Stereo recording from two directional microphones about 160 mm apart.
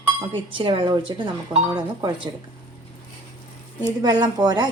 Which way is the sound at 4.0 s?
25° right (ahead or behind).